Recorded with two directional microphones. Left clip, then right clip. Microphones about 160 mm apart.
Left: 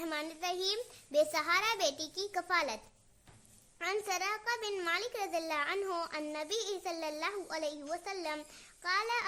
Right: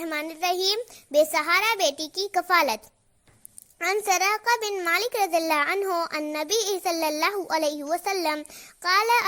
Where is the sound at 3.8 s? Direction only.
45° right (ahead or behind).